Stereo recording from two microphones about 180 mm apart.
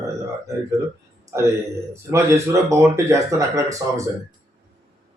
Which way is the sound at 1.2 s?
15° right (ahead or behind).